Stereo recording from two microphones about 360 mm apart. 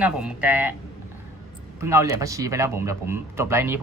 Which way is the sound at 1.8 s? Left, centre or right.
Centre.